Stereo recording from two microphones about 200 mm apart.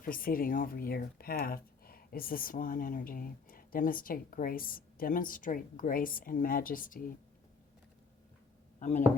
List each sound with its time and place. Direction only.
0.0 s speech: 45° left (ahead or behind)
8.8 s speech: 40° left (ahead or behind)